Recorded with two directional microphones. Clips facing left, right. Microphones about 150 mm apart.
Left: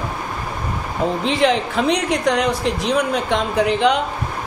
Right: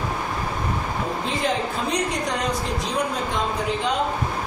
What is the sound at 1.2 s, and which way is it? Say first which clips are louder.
A woman's voice: left 7 dB; 80° left.